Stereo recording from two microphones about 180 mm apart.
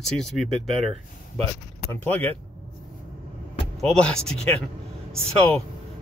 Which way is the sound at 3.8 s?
5° left (ahead or behind).